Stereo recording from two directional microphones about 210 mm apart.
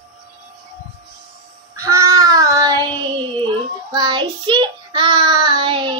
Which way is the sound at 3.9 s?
20° right (ahead or behind).